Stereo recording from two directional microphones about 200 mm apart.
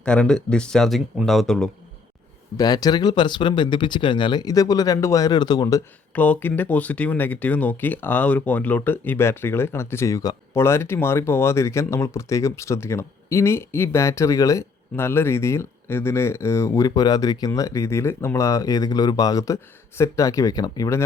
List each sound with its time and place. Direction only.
0.0 s speech: 5° left (ahead or behind)
2.6 s speech: 20° left (ahead or behind)